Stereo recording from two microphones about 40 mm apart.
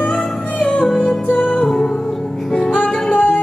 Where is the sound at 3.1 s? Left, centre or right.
Left.